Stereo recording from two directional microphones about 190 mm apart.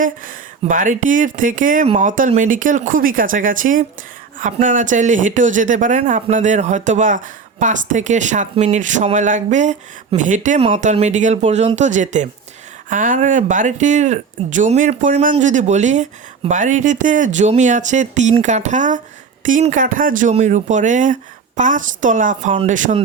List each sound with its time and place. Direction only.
0.0 s speech: 45° right (ahead or behind)